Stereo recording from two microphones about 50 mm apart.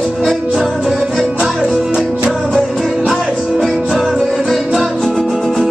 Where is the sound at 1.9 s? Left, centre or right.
Right.